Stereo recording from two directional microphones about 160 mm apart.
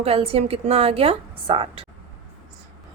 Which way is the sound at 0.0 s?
40° right (ahead or behind).